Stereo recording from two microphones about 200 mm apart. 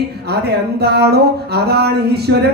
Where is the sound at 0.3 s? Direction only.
55° right (ahead or behind).